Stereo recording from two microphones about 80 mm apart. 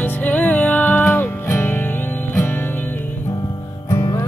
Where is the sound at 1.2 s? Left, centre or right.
Left.